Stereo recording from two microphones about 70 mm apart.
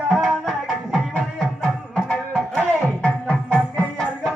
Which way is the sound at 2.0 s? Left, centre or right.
Centre.